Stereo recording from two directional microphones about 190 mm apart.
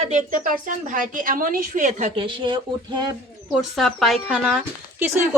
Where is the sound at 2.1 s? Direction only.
25° right (ahead or behind).